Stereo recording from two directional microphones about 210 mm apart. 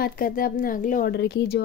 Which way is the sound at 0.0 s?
40° left (ahead or behind).